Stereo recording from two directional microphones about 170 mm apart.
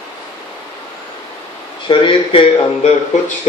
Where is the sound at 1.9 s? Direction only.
30° left (ahead or behind).